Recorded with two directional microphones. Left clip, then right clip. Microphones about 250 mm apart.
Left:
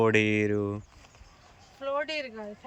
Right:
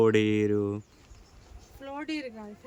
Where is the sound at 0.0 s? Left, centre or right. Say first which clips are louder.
Even; centre.